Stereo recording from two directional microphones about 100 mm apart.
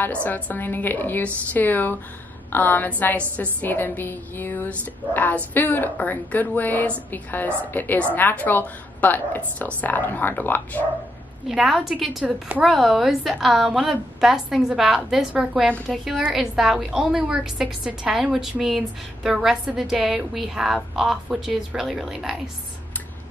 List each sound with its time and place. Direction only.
0.0 s a woman's voice: 15° left (ahead or behind)
11.4 s a woman's voice: centre (ahead or behind)